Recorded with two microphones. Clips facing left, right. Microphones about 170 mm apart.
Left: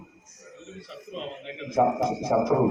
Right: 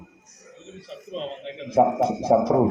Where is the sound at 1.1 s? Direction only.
35° right (ahead or behind).